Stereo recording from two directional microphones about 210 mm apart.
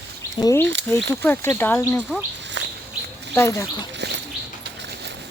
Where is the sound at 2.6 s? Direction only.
60° right (ahead or behind).